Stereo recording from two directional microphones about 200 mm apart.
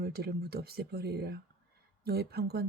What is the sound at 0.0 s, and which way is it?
Speech, 50° right (ahead or behind).